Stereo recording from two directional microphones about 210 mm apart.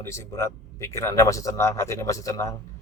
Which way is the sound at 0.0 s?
15° left (ahead or behind).